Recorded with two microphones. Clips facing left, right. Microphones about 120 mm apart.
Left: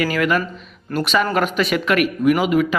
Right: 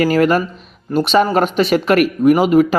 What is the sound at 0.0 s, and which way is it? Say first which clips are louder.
Speech: right 6 dB; 40° right (ahead or behind).